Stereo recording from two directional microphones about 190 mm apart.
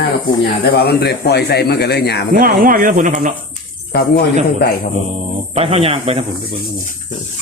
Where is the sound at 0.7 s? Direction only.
55° left (ahead or behind).